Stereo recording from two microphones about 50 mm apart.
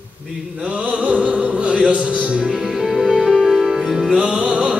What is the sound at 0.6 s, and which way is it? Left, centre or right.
Music, right.